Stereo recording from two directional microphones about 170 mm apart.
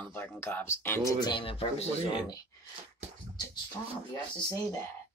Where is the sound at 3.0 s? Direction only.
45° right (ahead or behind).